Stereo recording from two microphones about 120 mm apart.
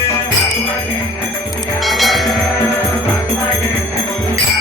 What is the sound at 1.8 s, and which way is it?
Music, centre (ahead or behind).